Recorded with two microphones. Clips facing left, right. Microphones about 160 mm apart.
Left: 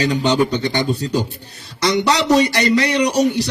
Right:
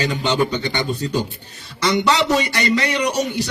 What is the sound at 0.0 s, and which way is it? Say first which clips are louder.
A man's voice: left 3 dB; 35° left (ahead or behind).